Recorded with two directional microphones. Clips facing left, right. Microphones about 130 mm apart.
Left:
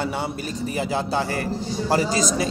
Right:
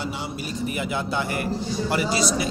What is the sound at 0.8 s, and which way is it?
A man's voice, 35° left (ahead or behind).